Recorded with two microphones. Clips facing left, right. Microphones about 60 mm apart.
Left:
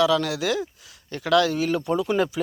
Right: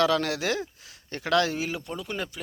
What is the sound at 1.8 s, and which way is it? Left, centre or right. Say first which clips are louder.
Speech: left 11 dB; centre.